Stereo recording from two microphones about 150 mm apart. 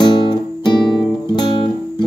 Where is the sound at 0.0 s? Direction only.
30° left (ahead or behind).